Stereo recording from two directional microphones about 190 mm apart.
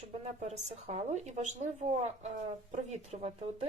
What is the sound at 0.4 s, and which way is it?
Speech, 35° right (ahead or behind).